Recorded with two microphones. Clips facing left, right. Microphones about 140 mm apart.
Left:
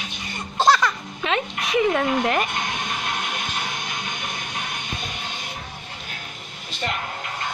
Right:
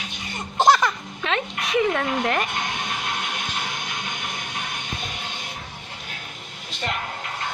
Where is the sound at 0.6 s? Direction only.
20° right (ahead or behind).